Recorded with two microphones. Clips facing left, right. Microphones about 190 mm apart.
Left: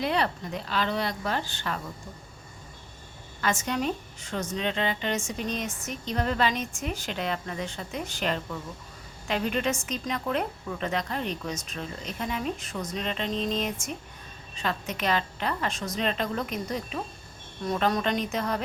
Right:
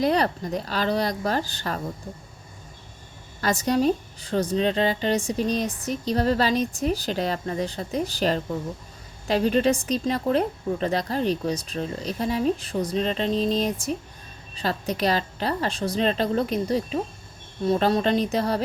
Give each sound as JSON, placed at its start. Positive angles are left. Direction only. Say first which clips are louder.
{"t": 0.0, "sound": "a woman's voice", "louder": "right 5 dB", "side_deg": -40}
{"t": 3.4, "sound": "a woman's voice", "louder": "right 6 dB", "side_deg": -35}